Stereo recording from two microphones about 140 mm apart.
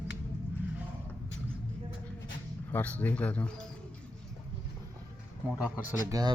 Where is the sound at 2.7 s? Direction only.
10° left (ahead or behind).